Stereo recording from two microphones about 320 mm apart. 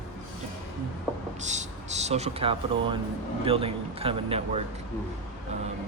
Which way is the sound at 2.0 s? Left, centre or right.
Centre.